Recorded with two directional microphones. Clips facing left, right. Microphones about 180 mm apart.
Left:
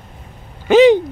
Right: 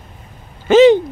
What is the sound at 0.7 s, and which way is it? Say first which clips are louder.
Owl: right 1 dB; 15° left (ahead or behind).